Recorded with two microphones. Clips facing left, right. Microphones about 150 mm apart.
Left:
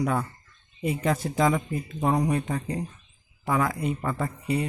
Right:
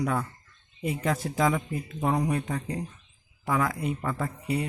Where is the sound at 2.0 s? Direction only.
15° left (ahead or behind).